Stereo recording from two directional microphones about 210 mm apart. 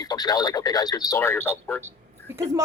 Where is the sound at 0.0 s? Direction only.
20° left (ahead or behind).